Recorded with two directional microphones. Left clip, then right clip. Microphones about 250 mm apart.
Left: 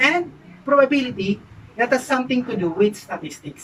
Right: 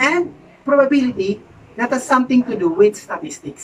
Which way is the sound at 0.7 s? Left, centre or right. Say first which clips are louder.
Right 2 dB; centre.